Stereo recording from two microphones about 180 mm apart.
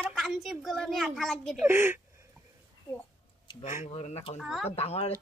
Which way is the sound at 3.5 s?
40° left (ahead or behind).